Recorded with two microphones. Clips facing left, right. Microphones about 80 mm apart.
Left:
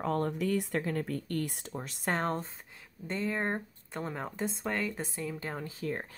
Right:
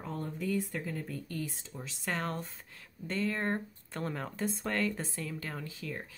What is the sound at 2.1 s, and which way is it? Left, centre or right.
Speech, left.